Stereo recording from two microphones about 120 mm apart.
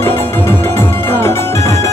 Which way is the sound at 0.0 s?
20° left (ahead or behind).